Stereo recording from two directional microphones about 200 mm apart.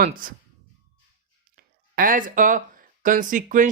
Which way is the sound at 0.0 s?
45° right (ahead or behind).